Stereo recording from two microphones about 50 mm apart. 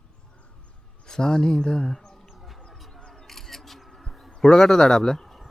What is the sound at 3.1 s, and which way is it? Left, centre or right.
Single-lens reflex camera, centre.